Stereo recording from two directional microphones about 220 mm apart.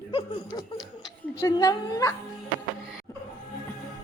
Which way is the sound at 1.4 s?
15° left (ahead or behind).